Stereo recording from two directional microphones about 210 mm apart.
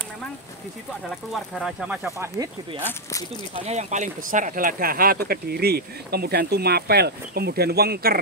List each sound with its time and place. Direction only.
1.3 s speech: centre (ahead or behind)
2.1 s speech: 15° right (ahead or behind)
3.6 s speech: 35° right (ahead or behind)